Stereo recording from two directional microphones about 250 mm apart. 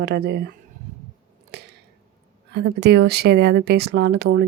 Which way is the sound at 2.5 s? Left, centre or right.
Right.